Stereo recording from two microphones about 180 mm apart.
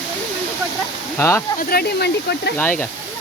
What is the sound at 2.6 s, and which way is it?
Speech, 10° left (ahead or behind).